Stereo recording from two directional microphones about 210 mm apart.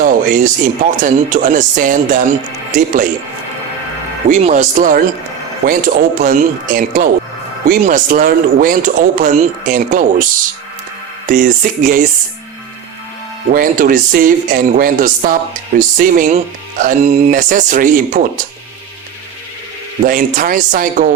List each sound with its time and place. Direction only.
0.0 s speech: 40° right (ahead or behind)
4.3 s speech: 35° right (ahead or behind)
11.3 s speech: 40° right (ahead or behind)
13.5 s speech: 40° right (ahead or behind)
20.1 s speech: 40° right (ahead or behind)